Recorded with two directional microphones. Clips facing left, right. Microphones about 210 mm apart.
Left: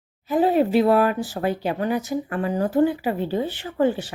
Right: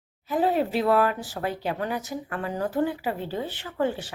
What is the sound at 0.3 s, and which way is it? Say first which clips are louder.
Speech: left 5 dB; 15° left (ahead or behind).